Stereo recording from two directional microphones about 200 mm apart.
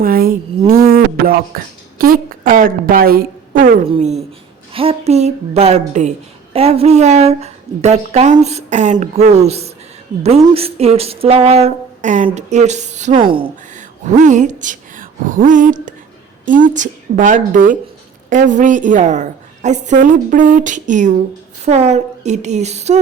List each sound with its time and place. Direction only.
0.0 s a sound: 45° right (ahead or behind)
0.7 s speech: 45° right (ahead or behind)
3.8 s a woman's voice: 30° right (ahead or behind)
13.7 s a woman's voice: 40° right (ahead or behind)